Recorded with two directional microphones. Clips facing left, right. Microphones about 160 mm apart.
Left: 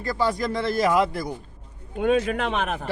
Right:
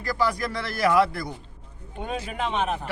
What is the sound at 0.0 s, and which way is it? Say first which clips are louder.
Speech: left 1 dB; 25° left (ahead or behind).